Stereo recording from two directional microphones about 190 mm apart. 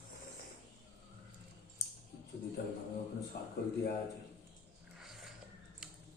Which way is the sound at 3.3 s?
55° left (ahead or behind).